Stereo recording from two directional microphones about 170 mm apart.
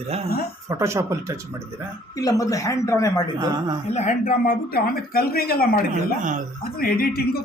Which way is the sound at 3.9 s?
45° left (ahead or behind).